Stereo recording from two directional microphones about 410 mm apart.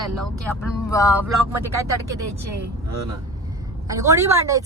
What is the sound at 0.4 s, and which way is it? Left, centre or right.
Speech, centre.